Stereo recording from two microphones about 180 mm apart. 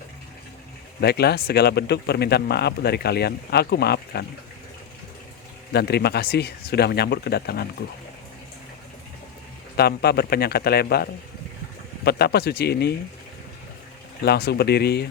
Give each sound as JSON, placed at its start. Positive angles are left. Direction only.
{"t": 1.0, "sound": "speech", "side_deg": 65}
{"t": 5.7, "sound": "speech", "side_deg": 65}
{"t": 9.7, "sound": "speech", "side_deg": 60}
{"t": 14.3, "sound": "speech", "side_deg": 65}